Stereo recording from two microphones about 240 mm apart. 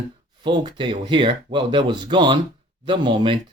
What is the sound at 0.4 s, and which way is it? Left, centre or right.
Speech, centre.